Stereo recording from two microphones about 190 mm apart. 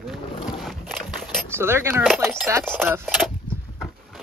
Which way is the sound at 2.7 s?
10° right (ahead or behind).